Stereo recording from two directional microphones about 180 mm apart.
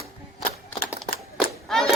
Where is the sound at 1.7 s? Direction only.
Centre (ahead or behind).